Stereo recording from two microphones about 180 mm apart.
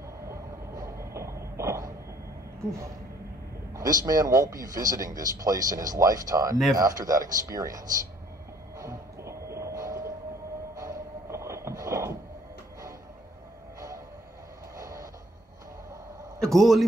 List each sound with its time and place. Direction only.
0.3 s train: 15° right (ahead or behind)
3.7 s speech: 20° right (ahead or behind)
8.7 s music: 15° right (ahead or behind)
13.7 s train: 20° right (ahead or behind)
14.8 s a sound: 20° right (ahead or behind)
16.3 s a sound: centre (ahead or behind)